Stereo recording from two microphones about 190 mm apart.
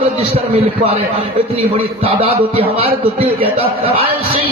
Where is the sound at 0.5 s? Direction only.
30° right (ahead or behind).